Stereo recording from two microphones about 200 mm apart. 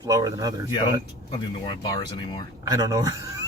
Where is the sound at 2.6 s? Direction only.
20° right (ahead or behind).